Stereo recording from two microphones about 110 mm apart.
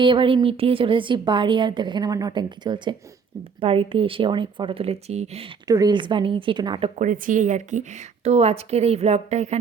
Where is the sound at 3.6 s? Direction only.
60° right (ahead or behind); by 5.5 s 75° right (ahead or behind).